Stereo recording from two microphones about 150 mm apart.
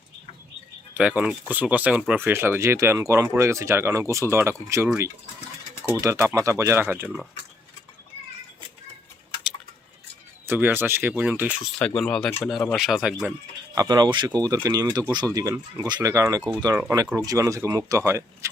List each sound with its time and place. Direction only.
0.9 s speech: 10° right (ahead or behind)
5.9 s speech: 20° right (ahead or behind)
10.4 s speech: 15° right (ahead or behind)
11.9 s speech: 5° left (ahead or behind)
13.7 s speech: 25° right (ahead or behind)